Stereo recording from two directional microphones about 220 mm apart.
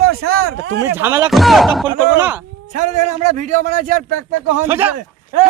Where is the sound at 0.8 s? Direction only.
10° right (ahead or behind).